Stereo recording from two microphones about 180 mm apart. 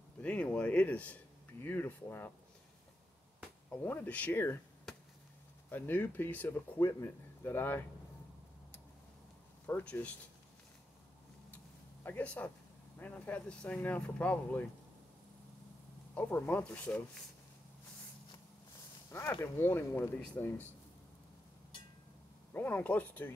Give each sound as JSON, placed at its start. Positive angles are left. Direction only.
{"t": 0.2, "sound": "a man's voice", "side_deg": 5}
{"t": 3.7, "sound": "a man's voice", "side_deg": 10}
{"t": 5.7, "sound": "a man's voice", "side_deg": 10}
{"t": 9.7, "sound": "a man's voice", "side_deg": 10}
{"t": 11.5, "sound": "a sound", "side_deg": 10}
{"t": 13.0, "sound": "a man's voice", "side_deg": 10}
{"t": 16.2, "sound": "a man's voice", "side_deg": 10}
{"t": 19.0, "sound": "a man's voice", "side_deg": 15}
{"t": 22.5, "sound": "a man's voice", "side_deg": 10}